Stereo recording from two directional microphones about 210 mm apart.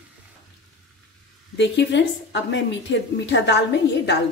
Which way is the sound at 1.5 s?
55° left (ahead or behind).